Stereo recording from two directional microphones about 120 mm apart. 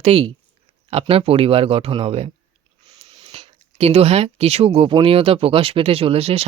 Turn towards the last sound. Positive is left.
turn(degrees=-55)  # may be behind; listen again after turning